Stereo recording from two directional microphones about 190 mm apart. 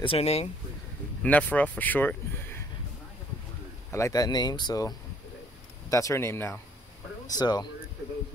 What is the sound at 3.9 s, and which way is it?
Speech, 15° left (ahead or behind).